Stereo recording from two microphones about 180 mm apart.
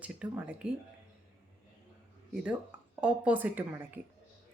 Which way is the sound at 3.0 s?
10° right (ahead or behind).